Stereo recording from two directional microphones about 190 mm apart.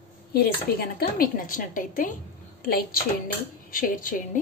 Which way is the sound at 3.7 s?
45° left (ahead or behind).